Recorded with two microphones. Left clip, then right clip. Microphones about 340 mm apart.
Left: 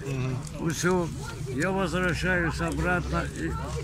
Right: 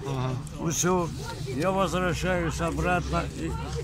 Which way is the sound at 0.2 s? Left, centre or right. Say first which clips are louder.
Right 1 dB; centre.